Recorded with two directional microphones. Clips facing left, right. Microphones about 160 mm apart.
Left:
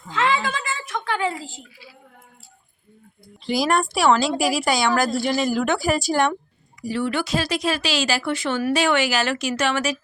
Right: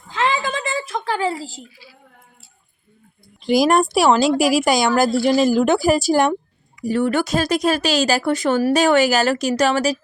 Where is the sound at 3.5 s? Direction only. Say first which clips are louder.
Right 6 dB; 45° right (ahead or behind).